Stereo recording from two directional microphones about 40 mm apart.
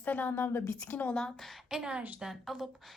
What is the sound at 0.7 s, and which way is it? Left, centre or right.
Speech, left.